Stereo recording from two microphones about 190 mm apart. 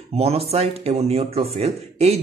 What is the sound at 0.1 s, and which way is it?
Speech, 35° right (ahead or behind).